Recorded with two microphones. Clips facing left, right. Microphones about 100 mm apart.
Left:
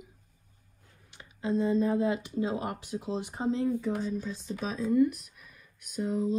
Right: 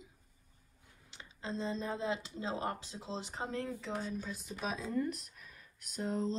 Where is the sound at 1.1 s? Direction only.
25° right (ahead or behind).